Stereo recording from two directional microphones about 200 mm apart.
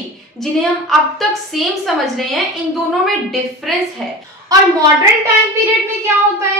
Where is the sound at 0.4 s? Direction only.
Centre (ahead or behind).